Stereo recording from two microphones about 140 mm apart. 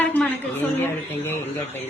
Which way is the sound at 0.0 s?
10° left (ahead or behind).